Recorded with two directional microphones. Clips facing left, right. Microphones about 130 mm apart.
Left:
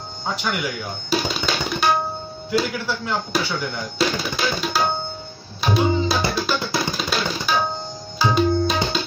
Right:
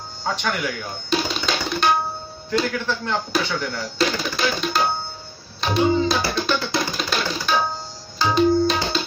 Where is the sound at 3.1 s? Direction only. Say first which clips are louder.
Even; 15° left (ahead or behind).